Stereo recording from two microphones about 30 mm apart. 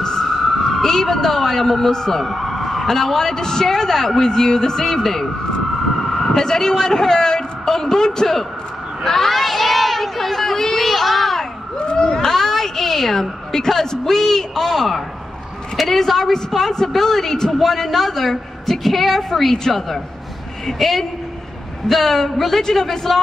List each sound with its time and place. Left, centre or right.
0.0 s emergency vehicle: centre
0.8 s speech: centre
2.1 s a man's voice: centre
3.6 s speech: centre
9.3 s a sound: centre
11.9 s a sound: left
12.3 s a sound: centre
14.7 s a woman's voice: centre
21.8 s a woman's voice: centre